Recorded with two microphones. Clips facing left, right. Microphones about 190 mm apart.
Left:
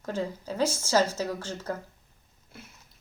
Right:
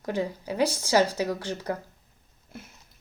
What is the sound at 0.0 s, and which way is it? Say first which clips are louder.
Speech: right 3 dB; 15° right (ahead or behind).